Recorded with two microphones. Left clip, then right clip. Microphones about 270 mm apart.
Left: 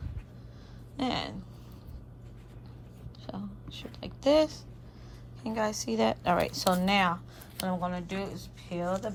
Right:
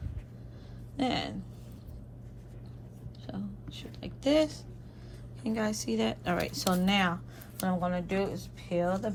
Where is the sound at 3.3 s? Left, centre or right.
Centre.